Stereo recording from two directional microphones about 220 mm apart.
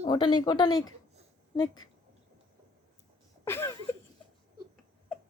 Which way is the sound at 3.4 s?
10° left (ahead or behind).